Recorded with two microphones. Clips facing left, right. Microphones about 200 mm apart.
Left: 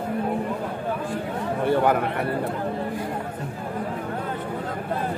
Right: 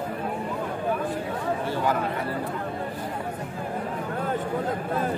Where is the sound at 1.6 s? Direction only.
60° left (ahead or behind).